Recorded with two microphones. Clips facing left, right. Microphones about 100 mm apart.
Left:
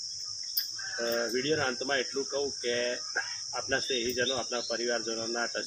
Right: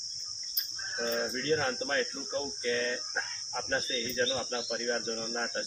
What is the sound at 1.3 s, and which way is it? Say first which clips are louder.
Speech: left 1 dB; 50° left (ahead or behind).